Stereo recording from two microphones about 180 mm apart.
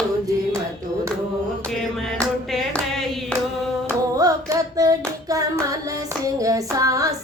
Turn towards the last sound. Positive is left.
turn(degrees=-20)  # may be behind; listen again after turning